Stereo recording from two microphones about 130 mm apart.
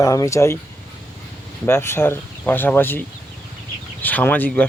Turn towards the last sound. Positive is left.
turn(degrees=15)  # may be behind; listen again after turning